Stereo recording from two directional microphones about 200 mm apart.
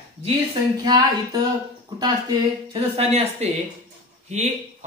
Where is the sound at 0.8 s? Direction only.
20° right (ahead or behind).